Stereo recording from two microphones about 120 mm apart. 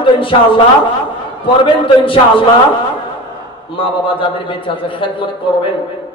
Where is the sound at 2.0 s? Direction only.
45° left (ahead or behind).